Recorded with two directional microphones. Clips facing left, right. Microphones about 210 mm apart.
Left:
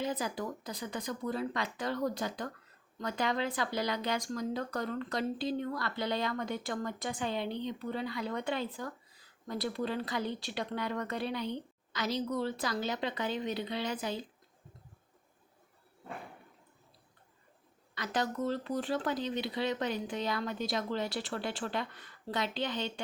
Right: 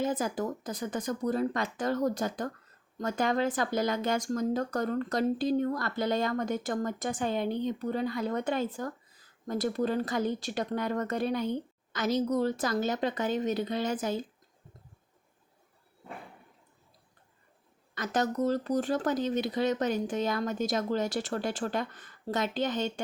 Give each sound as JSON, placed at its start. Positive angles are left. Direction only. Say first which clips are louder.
{"t": 0.0, "sound": "speech", "louder": "right 5 dB", "side_deg": -50}
{"t": 17.9, "sound": "speech", "louder": "right 5 dB", "side_deg": -45}